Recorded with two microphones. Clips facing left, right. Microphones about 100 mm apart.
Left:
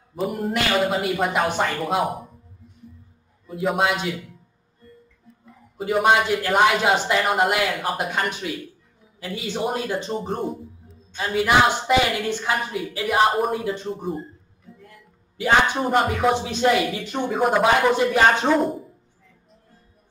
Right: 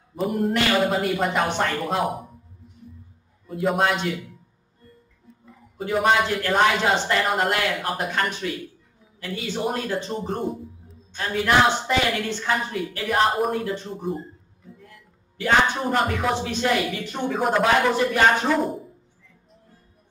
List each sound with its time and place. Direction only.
0.1 s speech: centre (ahead or behind)
3.4 s speech: centre (ahead or behind)
5.9 s speech: 5° left (ahead or behind)
10.2 s a man's voice: centre (ahead or behind)
15.3 s speech: 15° left (ahead or behind)
17.3 s speech: 10° left (ahead or behind)
17.9 s speech: 20° left (ahead or behind)
18.6 s speech: centre (ahead or behind)